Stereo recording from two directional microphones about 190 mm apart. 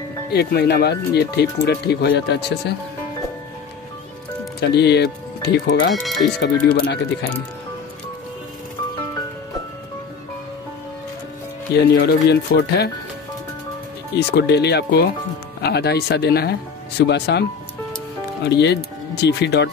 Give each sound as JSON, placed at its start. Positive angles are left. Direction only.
{"t": 0.3, "sound": "speech", "side_deg": 55}
{"t": 4.6, "sound": "speech", "side_deg": 60}
{"t": 6.0, "sound": "speech", "side_deg": 0}
{"t": 6.7, "sound": "speech", "side_deg": 60}
{"t": 11.7, "sound": "speech", "side_deg": 60}
{"t": 14.1, "sound": "speech", "side_deg": 60}